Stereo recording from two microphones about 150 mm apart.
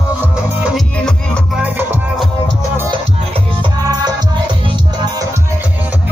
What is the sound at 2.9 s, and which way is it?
Music, 30° right (ahead or behind).